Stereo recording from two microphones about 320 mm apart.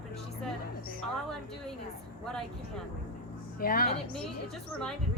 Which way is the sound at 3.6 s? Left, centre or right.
Left.